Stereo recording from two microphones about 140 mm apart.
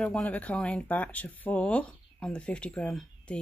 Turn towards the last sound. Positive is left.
turn(degrees=5)  # may be behind; listen again after turning